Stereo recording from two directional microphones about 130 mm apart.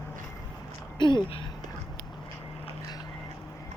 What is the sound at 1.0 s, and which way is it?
Speech, 35° left (ahead or behind).